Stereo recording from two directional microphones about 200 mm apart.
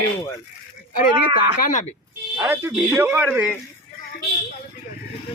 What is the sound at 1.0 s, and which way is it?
Speech, 45° left (ahead or behind).